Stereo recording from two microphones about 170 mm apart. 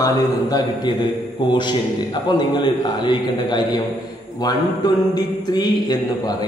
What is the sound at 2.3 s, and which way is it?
Speech, 25° left (ahead or behind).